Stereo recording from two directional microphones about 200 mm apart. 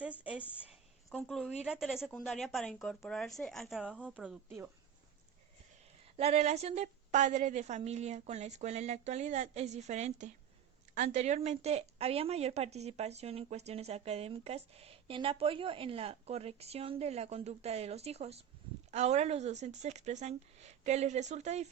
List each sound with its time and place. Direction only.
0.0 s a sound: 5° right (ahead or behind)
1.6 s speech: centre (ahead or behind)
4.2 s speech: 5° right (ahead or behind)
6.1 s speech: 30° right (ahead or behind)